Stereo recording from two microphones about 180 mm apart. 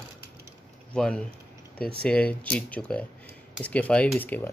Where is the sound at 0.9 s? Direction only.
5° left (ahead or behind).